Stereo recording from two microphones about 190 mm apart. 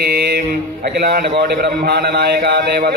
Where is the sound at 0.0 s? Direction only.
55° right (ahead or behind).